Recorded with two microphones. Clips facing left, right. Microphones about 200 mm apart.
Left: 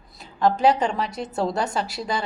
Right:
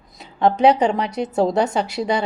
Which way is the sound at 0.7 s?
20° right (ahead or behind).